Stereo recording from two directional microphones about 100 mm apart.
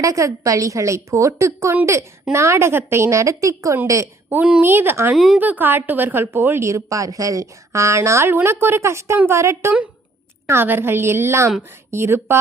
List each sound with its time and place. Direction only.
0.0 s a woman's voice: 35° right (ahead or behind)
4.3 s a woman's voice: 20° right (ahead or behind)
5.1 s speech: 5° right (ahead or behind)
5.4 s a woman's voice: 20° right (ahead or behind)